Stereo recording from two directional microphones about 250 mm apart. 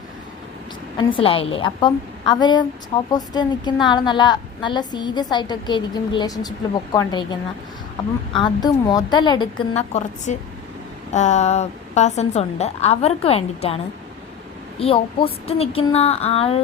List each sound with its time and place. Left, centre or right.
0.9 s a woman's voice: left
14.8 s a woman's voice: left